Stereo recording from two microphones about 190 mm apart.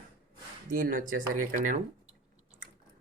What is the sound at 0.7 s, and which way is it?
Speech, 45° right (ahead or behind).